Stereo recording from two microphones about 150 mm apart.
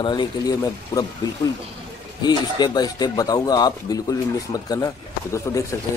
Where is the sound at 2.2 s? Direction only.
30° left (ahead or behind).